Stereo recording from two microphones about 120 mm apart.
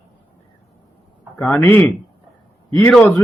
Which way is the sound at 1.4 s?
15° left (ahead or behind).